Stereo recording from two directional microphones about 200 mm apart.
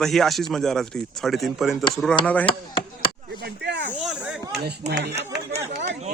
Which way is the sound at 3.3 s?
55° right (ahead or behind).